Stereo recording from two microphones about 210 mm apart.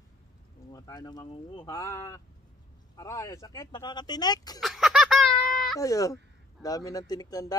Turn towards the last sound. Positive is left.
turn(degrees=15)  # may be behind; listen again after turning